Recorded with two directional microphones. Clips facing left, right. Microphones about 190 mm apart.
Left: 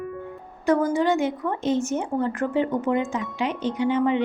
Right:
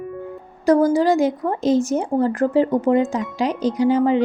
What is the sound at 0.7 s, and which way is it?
Speech, 35° right (ahead or behind).